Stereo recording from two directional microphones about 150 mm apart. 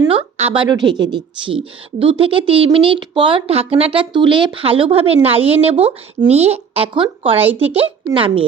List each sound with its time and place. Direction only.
0.1 s speech: 40° right (ahead or behind)